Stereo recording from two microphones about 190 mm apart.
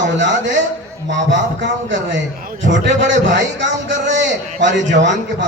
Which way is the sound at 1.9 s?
75° right (ahead or behind).